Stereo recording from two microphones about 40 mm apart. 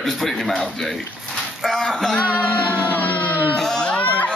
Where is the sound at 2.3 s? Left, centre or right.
Left.